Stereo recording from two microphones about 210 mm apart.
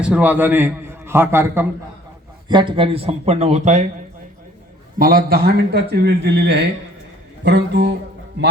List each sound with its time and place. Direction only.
0.0 s a man's voice: 5° right (ahead or behind)
2.5 s speech: 20° right (ahead or behind)
4.9 s a man's voice: 45° right (ahead or behind)